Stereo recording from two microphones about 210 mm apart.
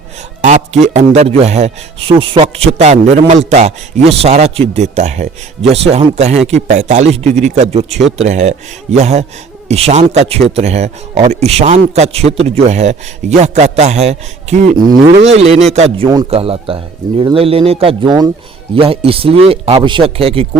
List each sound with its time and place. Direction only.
0.4 s a man's voice: 35° right (ahead or behind)